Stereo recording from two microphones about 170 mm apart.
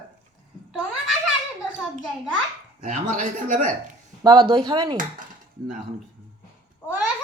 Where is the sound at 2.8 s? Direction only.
50° right (ahead or behind).